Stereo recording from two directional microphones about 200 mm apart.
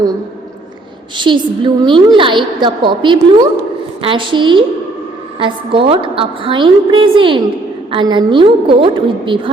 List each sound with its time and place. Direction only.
1.1 s a woman's voice: 25° right (ahead or behind)